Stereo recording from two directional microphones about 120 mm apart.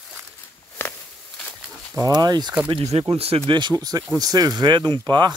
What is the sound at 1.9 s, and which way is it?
Speech, 30° right (ahead or behind).